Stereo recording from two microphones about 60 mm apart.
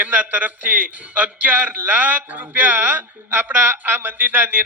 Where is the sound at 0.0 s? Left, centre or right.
Right.